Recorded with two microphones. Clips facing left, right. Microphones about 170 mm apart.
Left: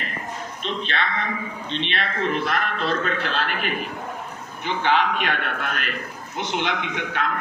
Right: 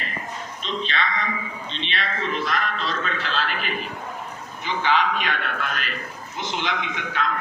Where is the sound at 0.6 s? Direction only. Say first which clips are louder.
Even; 55° left (ahead or behind).